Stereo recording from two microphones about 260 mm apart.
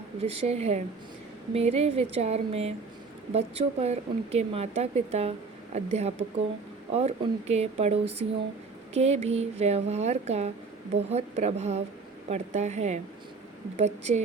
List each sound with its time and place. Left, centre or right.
0.2 s a woman's voice: right